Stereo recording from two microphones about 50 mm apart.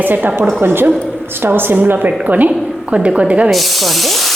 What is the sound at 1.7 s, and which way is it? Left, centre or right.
Speech, right.